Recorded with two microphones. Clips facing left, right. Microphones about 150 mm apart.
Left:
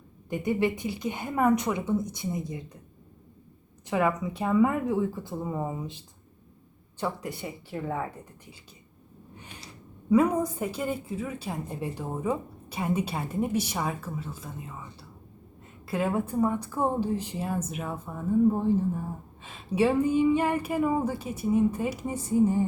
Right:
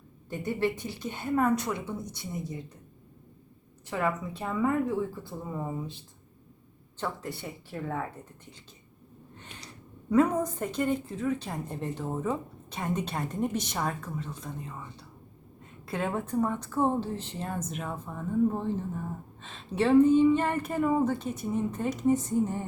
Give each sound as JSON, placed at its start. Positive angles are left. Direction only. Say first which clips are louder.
{"t": 0.3, "sound": "a woman's voice", "louder": "left 3 dB", "side_deg": 15}
{"t": 3.8, "sound": "a woman's voice", "louder": "left 4 dB", "side_deg": 15}
{"t": 7.0, "sound": "a woman's voice", "louder": "left 3 dB", "side_deg": 15}
{"t": 9.3, "sound": "a sound", "louder": "left 2 dB", "side_deg": 10}
{"t": 10.1, "sound": "a woman's voice", "louder": "left 1 dB", "side_deg": 10}
{"t": 15.9, "sound": "a woman's voice", "louder": "left 3 dB", "side_deg": 5}